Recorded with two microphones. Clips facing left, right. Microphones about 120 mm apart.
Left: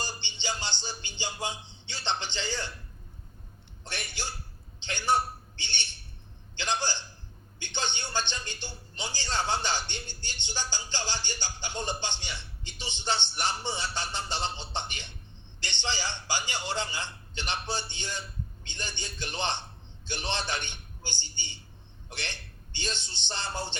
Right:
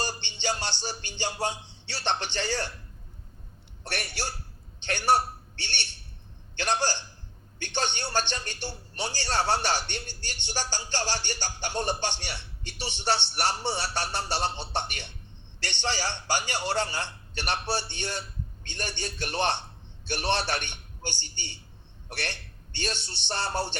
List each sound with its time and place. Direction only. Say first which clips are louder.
0.0 s music: right 5 dB; 65° right (ahead or behind)
3.8 s a man's voice: right 4 dB; 70° right (ahead or behind)